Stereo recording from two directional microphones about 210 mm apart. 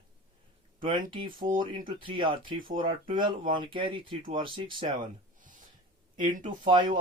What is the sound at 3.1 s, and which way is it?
Speech, 25° right (ahead or behind).